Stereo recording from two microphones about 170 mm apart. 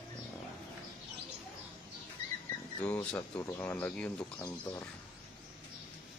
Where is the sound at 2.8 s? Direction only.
5° left (ahead or behind).